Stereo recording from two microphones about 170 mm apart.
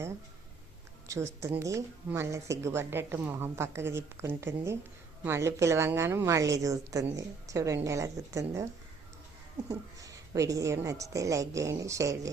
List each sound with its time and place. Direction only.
1.0 s a woman's voice: 15° right (ahead or behind)